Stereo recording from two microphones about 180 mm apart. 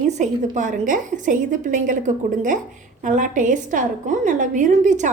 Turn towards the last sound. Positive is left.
turn(degrees=-40)  # may be behind; listen again after turning